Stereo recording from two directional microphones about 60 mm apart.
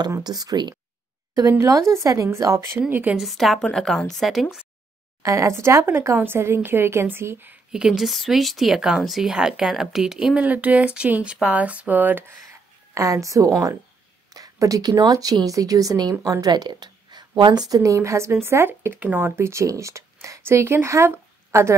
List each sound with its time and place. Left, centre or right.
0.1 s speech: right
1.6 s a woman's voice: right
2.9 s a woman's voice: right
3.2 s speech: centre
5.2 s a woman's voice: right
7.7 s speech: centre
10.3 s speech: right
12.9 s a woman's voice: right
17.6 s a woman's voice: right
19.6 s speech: right